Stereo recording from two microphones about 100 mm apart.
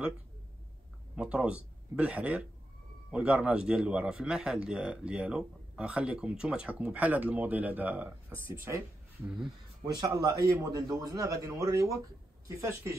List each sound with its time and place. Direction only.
1.1 s a man's voice: 10° right (ahead or behind)
9.2 s speech: 5° right (ahead or behind)
9.9 s a man's voice: 35° right (ahead or behind)